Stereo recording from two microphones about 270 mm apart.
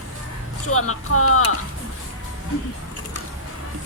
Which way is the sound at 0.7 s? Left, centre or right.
Left.